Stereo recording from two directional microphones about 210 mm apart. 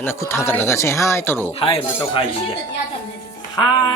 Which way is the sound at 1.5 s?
25° left (ahead or behind).